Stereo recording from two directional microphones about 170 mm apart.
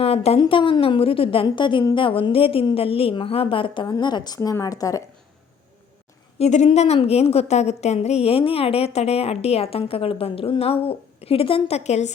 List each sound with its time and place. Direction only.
0.0 s a woman's voice: 35° left (ahead or behind); by 5.0 s 20° left (ahead or behind)
6.4 s a woman's voice: 40° left (ahead or behind)